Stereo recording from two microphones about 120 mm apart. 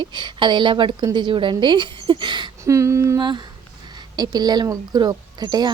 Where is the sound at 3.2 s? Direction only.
40° right (ahead or behind).